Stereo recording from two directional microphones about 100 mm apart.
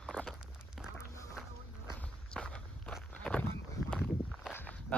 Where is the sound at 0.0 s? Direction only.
10° left (ahead or behind).